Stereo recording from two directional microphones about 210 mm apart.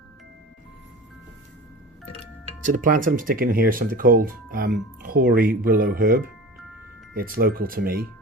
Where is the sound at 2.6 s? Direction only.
40° right (ahead or behind).